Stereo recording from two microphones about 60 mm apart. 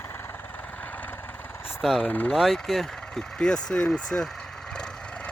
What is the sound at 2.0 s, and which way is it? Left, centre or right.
Speech, left.